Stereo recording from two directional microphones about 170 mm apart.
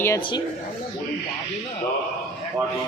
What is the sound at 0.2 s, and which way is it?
Speech, 30° left (ahead or behind).